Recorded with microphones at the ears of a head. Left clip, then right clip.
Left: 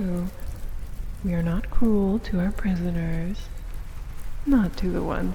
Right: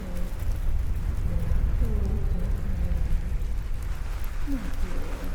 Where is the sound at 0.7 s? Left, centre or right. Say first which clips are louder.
Right 6 dB; right.